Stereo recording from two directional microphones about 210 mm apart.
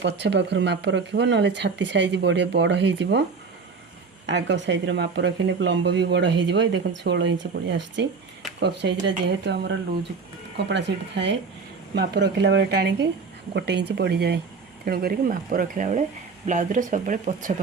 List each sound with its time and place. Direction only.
0.0 s speech: 55° right (ahead or behind)
4.3 s a woman's voice: 60° right (ahead or behind); by 17.5 s 35° right (ahead or behind)